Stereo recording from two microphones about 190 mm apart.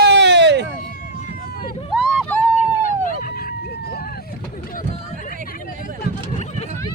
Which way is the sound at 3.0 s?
45° left (ahead or behind).